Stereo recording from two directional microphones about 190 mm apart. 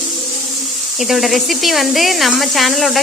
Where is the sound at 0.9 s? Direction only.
Centre (ahead or behind).